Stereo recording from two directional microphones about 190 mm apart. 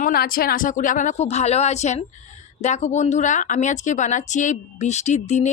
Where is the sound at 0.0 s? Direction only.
50° left (ahead or behind).